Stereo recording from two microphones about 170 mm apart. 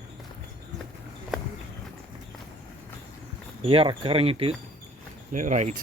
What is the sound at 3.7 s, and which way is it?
Speech, 30° right (ahead or behind).